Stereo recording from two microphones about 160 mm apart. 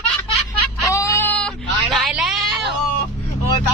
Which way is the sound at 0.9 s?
20° left (ahead or behind).